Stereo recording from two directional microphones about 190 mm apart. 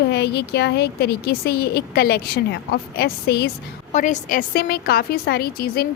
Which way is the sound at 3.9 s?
40° left (ahead or behind).